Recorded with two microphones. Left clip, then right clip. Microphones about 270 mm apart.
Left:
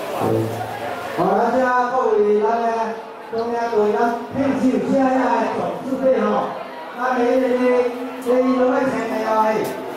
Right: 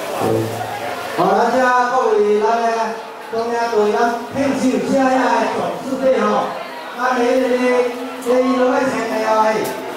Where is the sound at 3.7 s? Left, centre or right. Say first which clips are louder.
Right 2 dB; left.